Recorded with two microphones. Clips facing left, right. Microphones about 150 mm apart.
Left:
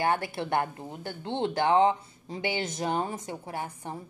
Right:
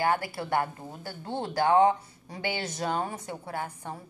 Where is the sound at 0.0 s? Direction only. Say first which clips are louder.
Even; 25° left (ahead or behind).